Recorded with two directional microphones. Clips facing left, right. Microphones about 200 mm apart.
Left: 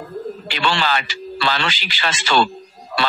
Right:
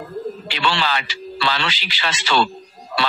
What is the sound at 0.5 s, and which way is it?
Speech, 45° left (ahead or behind).